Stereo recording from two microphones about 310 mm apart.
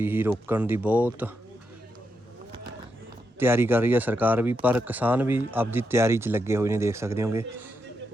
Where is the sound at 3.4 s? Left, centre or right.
Centre.